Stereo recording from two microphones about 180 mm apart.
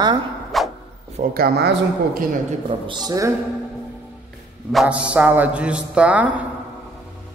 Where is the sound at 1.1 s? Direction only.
50° right (ahead or behind).